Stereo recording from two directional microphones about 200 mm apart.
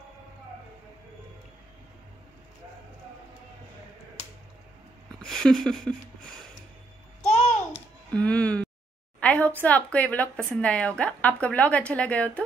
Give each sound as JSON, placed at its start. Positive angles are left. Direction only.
{"t": 5.2, "sound": "speech", "side_deg": 0}
{"t": 7.2, "sound": "babbling", "side_deg": 35}
{"t": 8.1, "sound": "a sound", "side_deg": 5}
{"t": 9.6, "sound": "a woman's voice", "side_deg": 5}